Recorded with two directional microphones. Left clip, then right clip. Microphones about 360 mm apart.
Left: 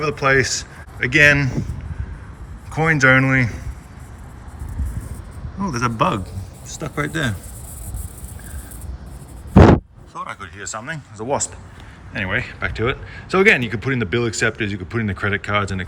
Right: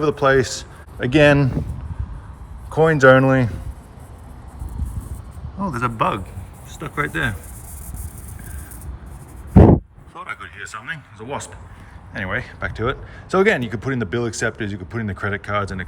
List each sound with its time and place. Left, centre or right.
0.0 s speech: centre
2.6 s speech: centre
5.6 s speech: centre
9.6 s a sound: centre
10.2 s speech: centre